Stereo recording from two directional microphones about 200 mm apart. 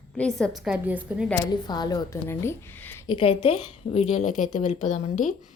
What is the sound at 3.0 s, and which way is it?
A woman's voice, 25° left (ahead or behind).